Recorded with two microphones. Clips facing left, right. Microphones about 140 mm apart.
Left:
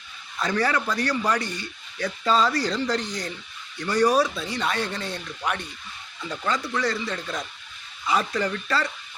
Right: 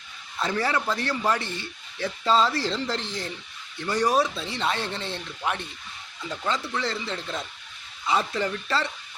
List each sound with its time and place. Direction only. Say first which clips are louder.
0.3 s a man's voice: left 2 dB; 25° right (ahead or behind)
6.7 s a man's voice: left 3 dB; 25° right (ahead or behind)